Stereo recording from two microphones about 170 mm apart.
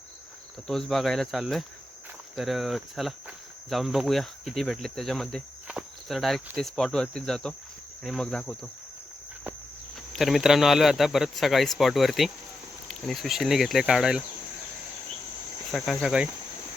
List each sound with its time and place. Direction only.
0.7 s speech: centre (ahead or behind)
2.3 s cricket: centre (ahead or behind)
6.6 s speech: centre (ahead or behind)
10.1 s speech: centre (ahead or behind)
15.7 s speech: centre (ahead or behind)